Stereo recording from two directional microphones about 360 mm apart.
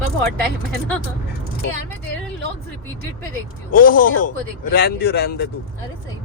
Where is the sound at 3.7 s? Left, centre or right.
Left.